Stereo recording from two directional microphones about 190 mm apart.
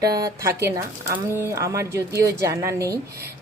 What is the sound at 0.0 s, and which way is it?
Speech, 20° right (ahead or behind).